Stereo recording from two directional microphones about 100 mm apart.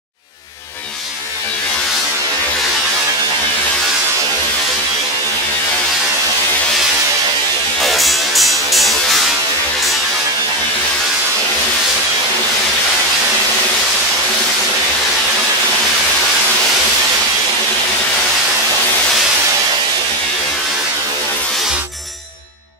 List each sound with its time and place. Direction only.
7.8 s music: centre (ahead or behind)